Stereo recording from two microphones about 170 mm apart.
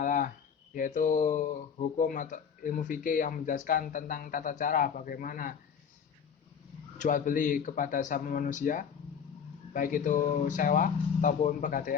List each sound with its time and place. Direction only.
0.0 s a sound: 50° left (ahead or behind)
0.7 s speech: 50° left (ahead or behind)
7.0 s speech: 50° left (ahead or behind)